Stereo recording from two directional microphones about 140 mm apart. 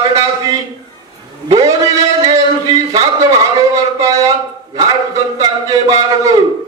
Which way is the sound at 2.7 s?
25° right (ahead or behind).